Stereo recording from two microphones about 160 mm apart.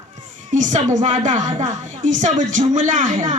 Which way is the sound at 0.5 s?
50° right (ahead or behind).